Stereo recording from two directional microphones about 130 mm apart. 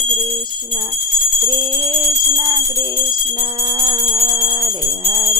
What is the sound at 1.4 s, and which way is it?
Jingle bell, 35° right (ahead or behind).